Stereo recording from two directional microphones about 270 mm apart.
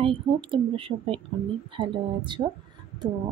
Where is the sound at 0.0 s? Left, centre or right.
Centre.